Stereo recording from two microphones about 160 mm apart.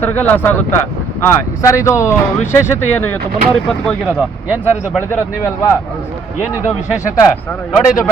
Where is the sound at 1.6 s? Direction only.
20° left (ahead or behind).